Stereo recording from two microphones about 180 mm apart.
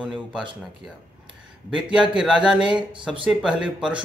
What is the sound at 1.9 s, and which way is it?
Speech, 5° right (ahead or behind).